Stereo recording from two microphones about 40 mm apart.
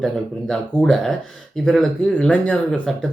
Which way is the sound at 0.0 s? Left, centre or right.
Centre.